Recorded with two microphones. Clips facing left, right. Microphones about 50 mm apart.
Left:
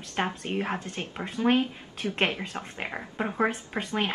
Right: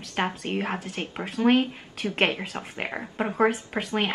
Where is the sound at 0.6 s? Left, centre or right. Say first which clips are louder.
Right 1 dB; centre.